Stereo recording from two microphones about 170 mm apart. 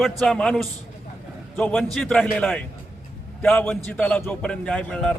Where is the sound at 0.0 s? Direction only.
Centre (ahead or behind).